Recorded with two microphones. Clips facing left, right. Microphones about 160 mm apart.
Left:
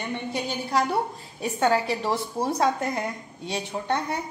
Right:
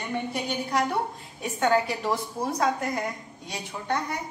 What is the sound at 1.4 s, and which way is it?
A woman's voice, 30° left (ahead or behind).